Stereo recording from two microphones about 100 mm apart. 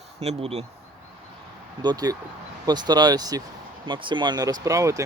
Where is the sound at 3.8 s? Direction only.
55° right (ahead or behind); by 5.0 s 35° right (ahead or behind).